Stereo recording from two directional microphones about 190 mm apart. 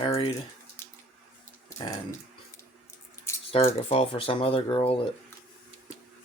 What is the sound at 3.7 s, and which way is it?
Speech, 30° left (ahead or behind).